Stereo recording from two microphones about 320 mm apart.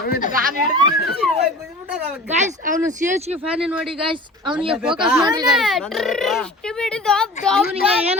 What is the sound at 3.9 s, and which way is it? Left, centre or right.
Speech, centre.